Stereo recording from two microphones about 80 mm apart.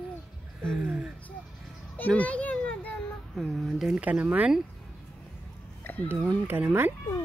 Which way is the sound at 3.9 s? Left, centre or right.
Centre.